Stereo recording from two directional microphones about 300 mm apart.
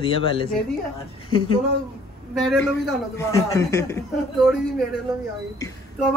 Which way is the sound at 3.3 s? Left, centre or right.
Centre.